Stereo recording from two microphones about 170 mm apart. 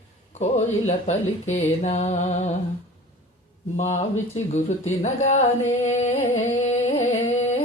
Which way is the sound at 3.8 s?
45° left (ahead or behind).